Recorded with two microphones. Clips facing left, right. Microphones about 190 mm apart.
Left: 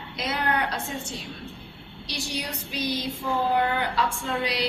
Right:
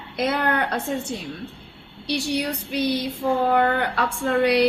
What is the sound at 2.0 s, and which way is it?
Speech, 60° right (ahead or behind).